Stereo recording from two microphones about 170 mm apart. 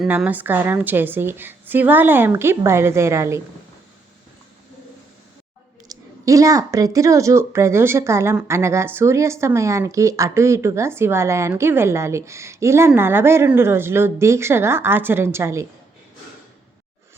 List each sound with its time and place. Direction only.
0.0 s a woman's voice: 5° right (ahead or behind)
5.9 s a woman's voice: 20° right (ahead or behind)